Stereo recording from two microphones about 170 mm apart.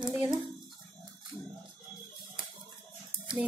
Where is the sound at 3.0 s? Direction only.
5° right (ahead or behind).